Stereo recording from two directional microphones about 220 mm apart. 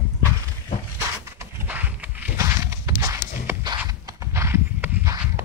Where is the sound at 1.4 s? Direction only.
5° right (ahead or behind).